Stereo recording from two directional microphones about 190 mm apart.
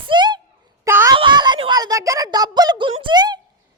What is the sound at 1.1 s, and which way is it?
A woman's voice, 25° right (ahead or behind).